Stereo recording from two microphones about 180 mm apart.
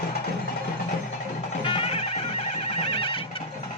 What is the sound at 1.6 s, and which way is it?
Music, 30° left (ahead or behind).